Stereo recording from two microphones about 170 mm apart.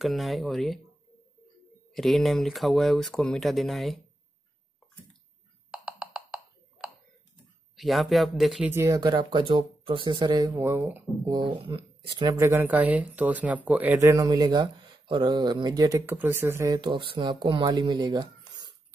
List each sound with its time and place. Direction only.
0.0 s speech: centre (ahead or behind)
2.0 s speech: centre (ahead or behind)
5.7 s a sound: 5° right (ahead or behind)
7.7 s speech: centre (ahead or behind)
8.6 s speech: 15° right (ahead or behind)
10.5 s speech: 15° right (ahead or behind)
11.3 s speech: 30° right (ahead or behind)